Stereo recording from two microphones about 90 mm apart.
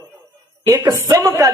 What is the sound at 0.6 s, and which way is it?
Speech, 40° right (ahead or behind).